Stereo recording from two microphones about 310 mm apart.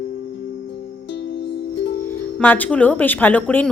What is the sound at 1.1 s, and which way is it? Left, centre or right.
Music, left.